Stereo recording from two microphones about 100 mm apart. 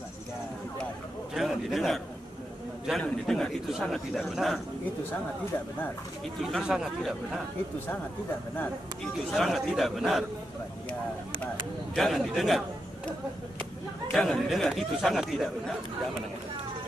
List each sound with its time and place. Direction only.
1.3 s a sound: 5° right (ahead or behind)
3.0 s speech: 5° left (ahead or behind)
6.6 s speech: 5° right (ahead or behind)
9.3 s speech: centre (ahead or behind)
11.9 s speech: centre (ahead or behind)
14.1 s speech: centre (ahead or behind)